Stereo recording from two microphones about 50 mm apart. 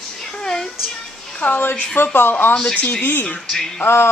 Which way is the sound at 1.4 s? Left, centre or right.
Left.